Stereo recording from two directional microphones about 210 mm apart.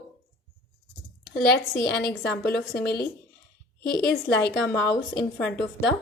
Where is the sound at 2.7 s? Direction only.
50° left (ahead or behind).